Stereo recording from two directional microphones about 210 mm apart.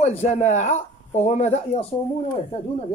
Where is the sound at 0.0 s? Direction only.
30° left (ahead or behind).